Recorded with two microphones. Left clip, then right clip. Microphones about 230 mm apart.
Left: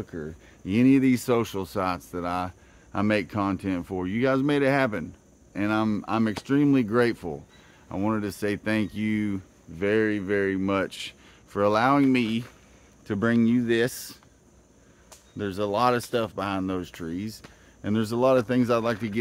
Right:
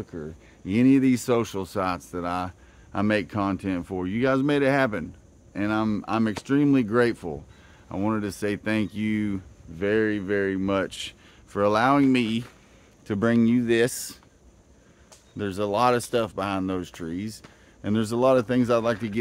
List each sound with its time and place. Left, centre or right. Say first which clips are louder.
0.0 s speech: even; centre; by 14.1 s right
15.3 s speech: right 1 dB; centre